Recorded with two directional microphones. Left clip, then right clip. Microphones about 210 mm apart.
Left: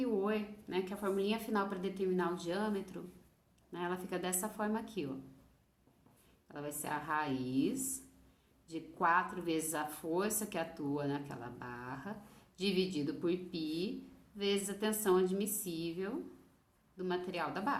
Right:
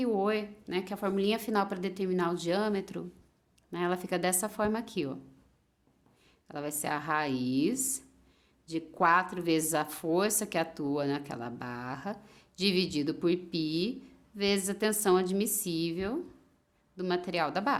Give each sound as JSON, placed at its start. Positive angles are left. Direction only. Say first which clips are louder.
{"t": 0.0, "sound": "speech", "louder": "right 6 dB", "side_deg": -55}
{"t": 6.5, "sound": "speech", "louder": "right 6 dB", "side_deg": -55}